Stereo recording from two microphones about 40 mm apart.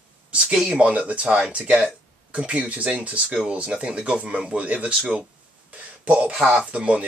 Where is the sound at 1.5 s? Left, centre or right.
Right.